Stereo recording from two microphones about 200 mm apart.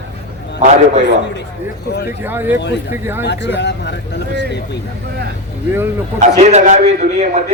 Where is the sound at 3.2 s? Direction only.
60° left (ahead or behind).